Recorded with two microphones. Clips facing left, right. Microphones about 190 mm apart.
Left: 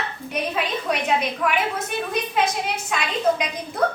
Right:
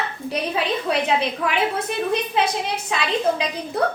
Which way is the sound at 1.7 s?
30° right (ahead or behind).